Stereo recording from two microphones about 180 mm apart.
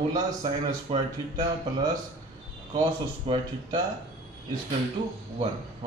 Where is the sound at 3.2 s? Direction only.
25° right (ahead or behind).